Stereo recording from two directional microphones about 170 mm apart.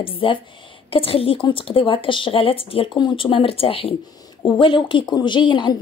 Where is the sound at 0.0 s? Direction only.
30° left (ahead or behind).